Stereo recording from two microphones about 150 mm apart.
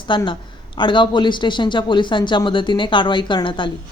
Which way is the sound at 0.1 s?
30° left (ahead or behind).